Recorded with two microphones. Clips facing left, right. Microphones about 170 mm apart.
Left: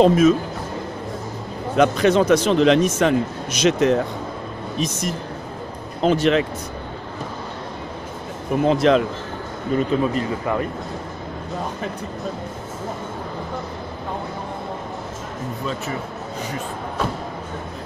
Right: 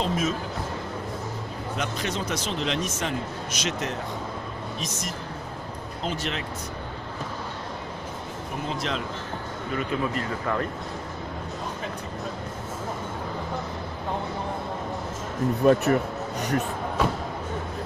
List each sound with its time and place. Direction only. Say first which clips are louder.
0.0 s speech: left 13 dB; 70° left (ahead or behind)
1.8 s speech: left 15 dB; 70° left (ahead or behind)
8.6 s speech: left 15 dB; 70° left (ahead or behind)
9.8 s speech: left 8 dB; 25° left (ahead or behind)
15.6 s speech: right 10 dB; 55° right (ahead or behind)